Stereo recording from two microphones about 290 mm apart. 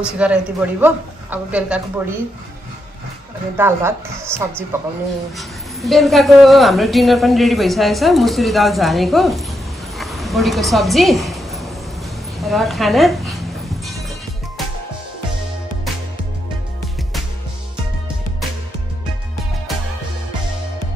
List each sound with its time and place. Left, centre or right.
0.0 s a woman's voice: centre
3.5 s a woman's voice: centre
9.9 s a sound: centre
12.4 s a woman's voice: centre